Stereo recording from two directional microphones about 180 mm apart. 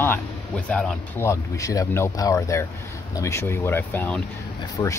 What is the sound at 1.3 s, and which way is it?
Speech, 20° left (ahead or behind).